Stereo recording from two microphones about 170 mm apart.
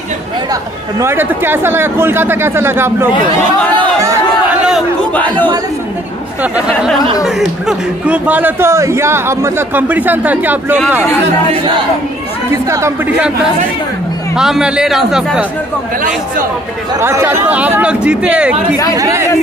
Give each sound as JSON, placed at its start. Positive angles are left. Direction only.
{"t": 0.5, "sound": "a man's voice", "side_deg": -15}
{"t": 4.0, "sound": "chatter", "side_deg": -20}
{"t": 6.4, "sound": "a man's voice", "side_deg": -10}
{"t": 11.5, "sound": "speech", "side_deg": -30}
{"t": 12.6, "sound": "a man's voice", "side_deg": -15}
{"t": 14.3, "sound": "a man's voice", "side_deg": -5}
{"t": 17.0, "sound": "a man's voice", "side_deg": -15}
{"t": 18.9, "sound": "speech", "side_deg": -20}